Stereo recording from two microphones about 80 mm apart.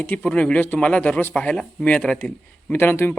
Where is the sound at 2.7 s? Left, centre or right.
Left.